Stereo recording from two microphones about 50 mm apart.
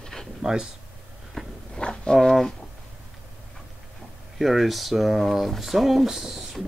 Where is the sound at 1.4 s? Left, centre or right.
Centre.